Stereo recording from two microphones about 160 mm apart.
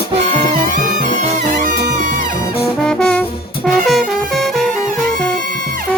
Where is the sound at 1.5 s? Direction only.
55° right (ahead or behind).